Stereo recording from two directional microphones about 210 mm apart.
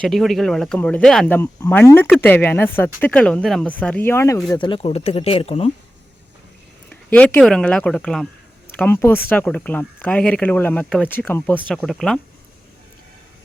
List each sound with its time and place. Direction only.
0.0 s speech: centre (ahead or behind)
4.5 s speech: 20° left (ahead or behind)
6.9 s speech: 5° left (ahead or behind)